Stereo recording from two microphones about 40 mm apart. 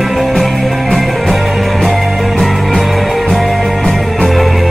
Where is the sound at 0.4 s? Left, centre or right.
Centre.